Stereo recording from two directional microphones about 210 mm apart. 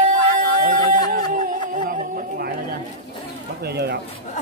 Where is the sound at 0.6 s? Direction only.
40° right (ahead or behind).